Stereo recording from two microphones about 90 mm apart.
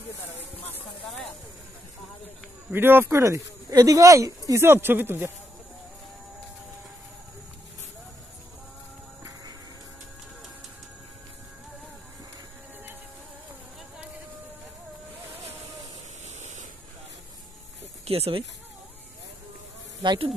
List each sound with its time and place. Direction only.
2.7 s speech: 25° right (ahead or behind)
4.8 s speech: 25° right (ahead or behind)
9.2 s music: 45° right (ahead or behind)
18.0 s speech: 90° right
20.0 s speech: 60° right (ahead or behind)